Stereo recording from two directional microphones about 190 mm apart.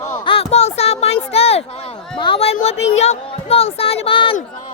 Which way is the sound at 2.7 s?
75° left (ahead or behind).